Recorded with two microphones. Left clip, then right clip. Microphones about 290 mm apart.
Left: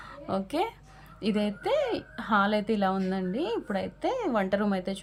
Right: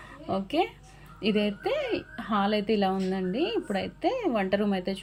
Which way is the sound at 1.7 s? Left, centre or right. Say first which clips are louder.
Left 2 dB; centre.